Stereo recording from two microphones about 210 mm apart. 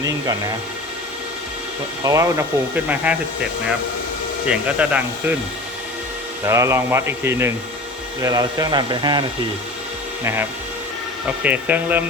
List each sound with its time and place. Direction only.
0.0 s speech: 15° right (ahead or behind)
2.0 s speech: 15° right (ahead or behind)
4.4 s speech: 5° right (ahead or behind)
6.4 s speech: 15° right (ahead or behind)
11.4 s speech: 5° right (ahead or behind)